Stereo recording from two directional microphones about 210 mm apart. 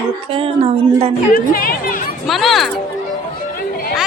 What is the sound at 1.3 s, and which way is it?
Speech, 40° left (ahead or behind).